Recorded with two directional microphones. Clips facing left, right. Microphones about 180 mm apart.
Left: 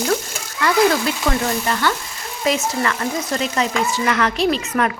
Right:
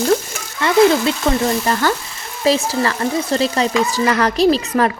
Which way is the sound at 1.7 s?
40° right (ahead or behind).